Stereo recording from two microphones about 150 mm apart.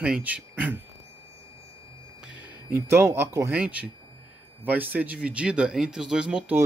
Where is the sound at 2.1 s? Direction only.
5° right (ahead or behind).